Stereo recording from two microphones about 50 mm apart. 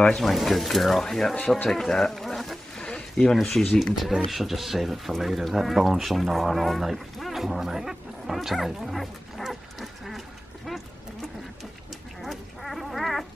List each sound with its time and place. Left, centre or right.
0.2 s speech: centre
2.8 s a sound: centre
3.2 s speech: centre
3.8 s speech: centre
12.2 s duck: centre